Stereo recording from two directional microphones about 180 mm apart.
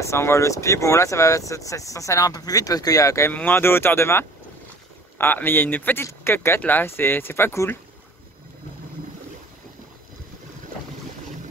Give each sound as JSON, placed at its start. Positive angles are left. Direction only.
{"t": 0.0, "sound": "speech", "side_deg": 15}